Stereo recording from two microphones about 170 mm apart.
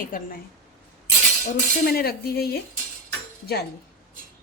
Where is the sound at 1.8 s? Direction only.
65° left (ahead or behind).